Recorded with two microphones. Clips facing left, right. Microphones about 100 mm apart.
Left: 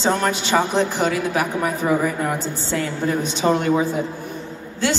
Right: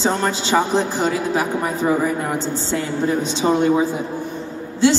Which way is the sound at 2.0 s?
10° right (ahead or behind).